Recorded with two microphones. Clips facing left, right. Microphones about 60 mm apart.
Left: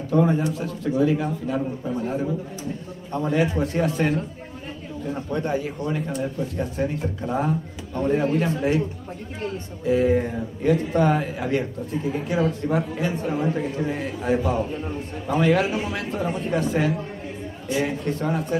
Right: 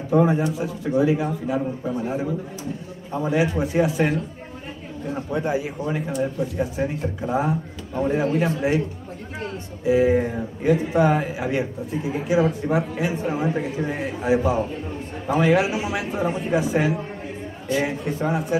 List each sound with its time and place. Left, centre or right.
0.1 s speech: centre
5.1 s speech: centre
9.8 s speech: centre